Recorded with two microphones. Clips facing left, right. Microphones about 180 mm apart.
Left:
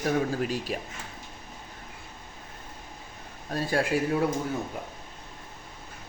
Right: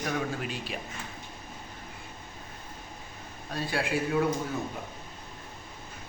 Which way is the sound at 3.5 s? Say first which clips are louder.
Left 4 dB; 45° left (ahead or behind).